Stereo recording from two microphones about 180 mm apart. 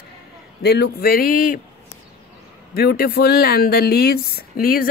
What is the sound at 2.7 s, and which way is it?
Speech, 60° left (ahead or behind).